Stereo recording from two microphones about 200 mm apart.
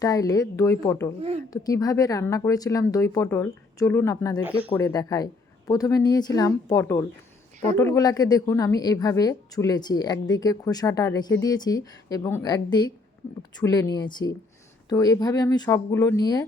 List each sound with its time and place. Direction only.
0.0 s a woman's voice: 15° left (ahead or behind)